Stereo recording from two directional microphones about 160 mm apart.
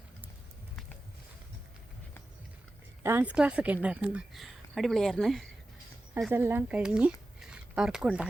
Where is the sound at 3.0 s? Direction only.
15° right (ahead or behind); by 5.4 s centre (ahead or behind).